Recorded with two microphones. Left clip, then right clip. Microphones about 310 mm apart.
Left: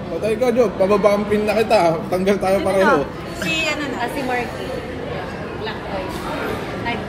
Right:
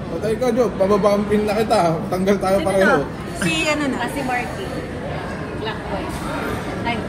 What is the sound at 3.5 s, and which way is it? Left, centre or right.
Speech, centre.